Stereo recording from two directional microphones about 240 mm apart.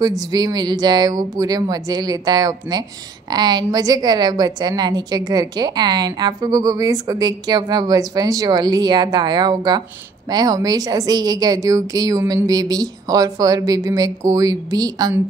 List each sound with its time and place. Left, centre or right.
0.3 s a woman's voice: centre